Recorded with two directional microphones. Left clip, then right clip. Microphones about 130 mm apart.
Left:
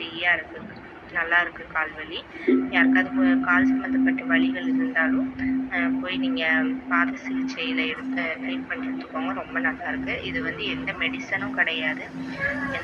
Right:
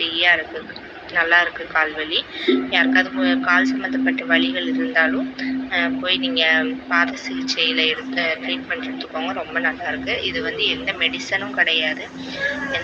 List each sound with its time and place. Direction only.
0.0 s a sound: 30° right (ahead or behind)
1.1 s speech: 30° right (ahead or behind)
4.0 s speech: 35° right (ahead or behind)